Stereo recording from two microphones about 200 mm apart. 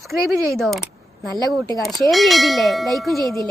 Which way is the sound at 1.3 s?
20° right (ahead or behind).